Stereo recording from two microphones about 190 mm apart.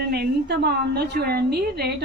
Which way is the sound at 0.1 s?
60° right (ahead or behind).